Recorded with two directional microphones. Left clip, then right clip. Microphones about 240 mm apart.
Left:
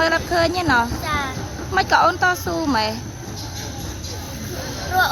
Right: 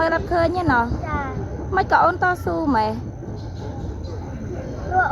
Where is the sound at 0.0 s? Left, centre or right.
Centre.